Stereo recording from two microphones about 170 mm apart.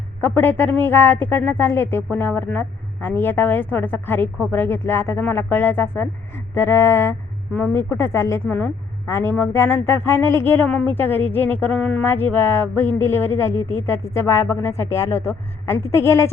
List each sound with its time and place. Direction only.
0.2 s a woman's voice: 10° left (ahead or behind)